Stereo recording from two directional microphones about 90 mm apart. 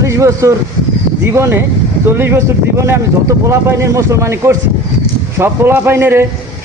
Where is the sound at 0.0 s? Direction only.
35° right (ahead or behind).